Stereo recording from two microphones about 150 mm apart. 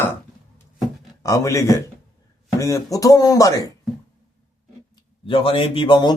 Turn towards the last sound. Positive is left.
turn(degrees=30)  # may be behind; listen again after turning